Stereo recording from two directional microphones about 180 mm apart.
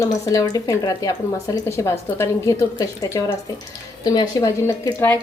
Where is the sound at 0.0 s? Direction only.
15° left (ahead or behind).